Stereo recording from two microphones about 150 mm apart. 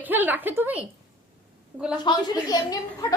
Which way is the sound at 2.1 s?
25° left (ahead or behind).